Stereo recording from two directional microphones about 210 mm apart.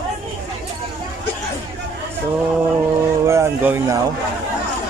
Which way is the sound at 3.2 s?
15° right (ahead or behind).